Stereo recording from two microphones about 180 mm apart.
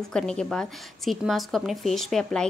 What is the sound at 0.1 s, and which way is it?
A woman's voice, 5° left (ahead or behind).